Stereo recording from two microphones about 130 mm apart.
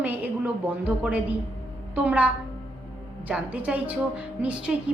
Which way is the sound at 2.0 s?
10° right (ahead or behind).